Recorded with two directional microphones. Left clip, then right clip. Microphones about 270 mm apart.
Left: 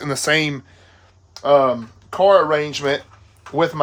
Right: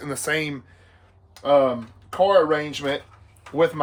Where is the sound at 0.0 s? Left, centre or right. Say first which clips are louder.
Left 7 dB; left.